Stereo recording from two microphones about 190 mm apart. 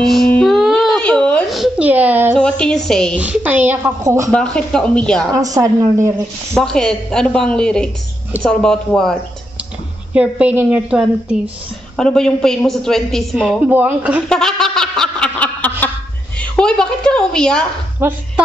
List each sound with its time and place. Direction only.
0.0 s a sound: centre (ahead or behind)
2.3 s a woman's voice: 5° left (ahead or behind)
3.2 s a woman's voice: 10° right (ahead or behind)
4.3 s a woman's voice: 5° left (ahead or behind)
5.3 s a woman's voice: 15° right (ahead or behind)
6.5 s a woman's voice: 5° left (ahead or behind)
10.1 s a woman's voice: 10° right (ahead or behind)
14.3 s a sound: 5° left (ahead or behind)
16.3 s a woman's voice: 5° left (ahead or behind)
18.0 s a woman's voice: 10° right (ahead or behind)